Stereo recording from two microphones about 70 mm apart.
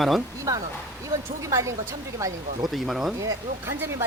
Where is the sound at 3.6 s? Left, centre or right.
Right.